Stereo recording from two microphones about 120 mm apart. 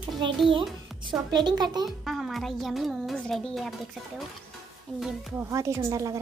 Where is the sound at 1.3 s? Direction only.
35° right (ahead or behind).